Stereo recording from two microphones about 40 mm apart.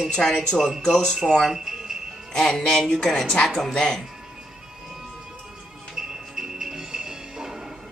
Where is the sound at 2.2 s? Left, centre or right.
Centre.